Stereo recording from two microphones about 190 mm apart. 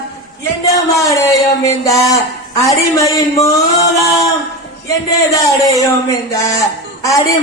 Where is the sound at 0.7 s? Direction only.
15° left (ahead or behind).